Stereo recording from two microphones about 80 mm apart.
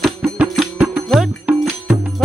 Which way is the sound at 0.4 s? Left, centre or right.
Centre.